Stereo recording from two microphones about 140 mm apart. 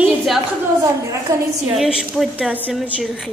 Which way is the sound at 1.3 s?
25° right (ahead or behind).